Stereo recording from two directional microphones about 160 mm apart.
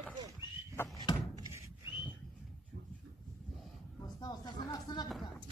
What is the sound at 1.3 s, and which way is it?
Door, 20° right (ahead or behind).